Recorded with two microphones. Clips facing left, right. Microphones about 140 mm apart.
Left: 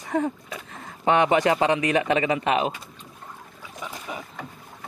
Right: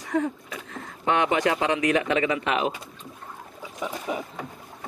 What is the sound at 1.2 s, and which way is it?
Speech, 5° left (ahead or behind).